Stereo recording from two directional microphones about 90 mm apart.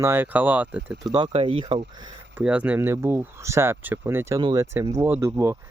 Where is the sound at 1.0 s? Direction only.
50° right (ahead or behind).